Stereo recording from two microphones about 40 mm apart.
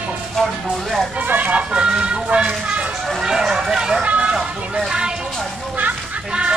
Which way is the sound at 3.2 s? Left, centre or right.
Centre.